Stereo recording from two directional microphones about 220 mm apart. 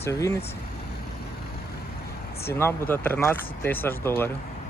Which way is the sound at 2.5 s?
10° left (ahead or behind).